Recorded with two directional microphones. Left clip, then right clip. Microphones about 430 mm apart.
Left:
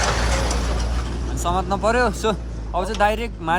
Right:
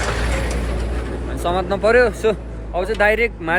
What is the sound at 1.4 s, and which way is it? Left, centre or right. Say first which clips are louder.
A man's voice: right 3 dB; centre.